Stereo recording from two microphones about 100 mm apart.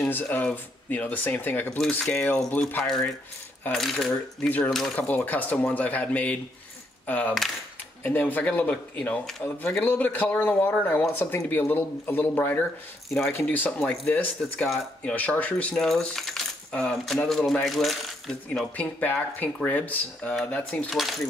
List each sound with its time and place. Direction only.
0.0 s speech: 20° left (ahead or behind)
2.8 s coin: 5° left (ahead or behind)
4.4 s speech: 15° left (ahead or behind)
4.6 s coin: 5° left (ahead or behind)
4.9 s speech: 15° left (ahead or behind)
15.0 s coin: 15° left (ahead or behind)
18.8 s speech: 15° left (ahead or behind)